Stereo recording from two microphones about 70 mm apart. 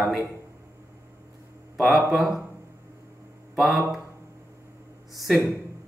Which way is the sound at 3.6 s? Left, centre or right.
Centre.